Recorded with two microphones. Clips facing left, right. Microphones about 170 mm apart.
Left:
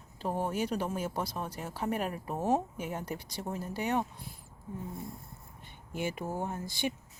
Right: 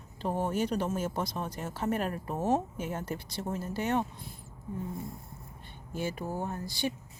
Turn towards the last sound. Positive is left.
turn(degrees=15)  # may be behind; listen again after turning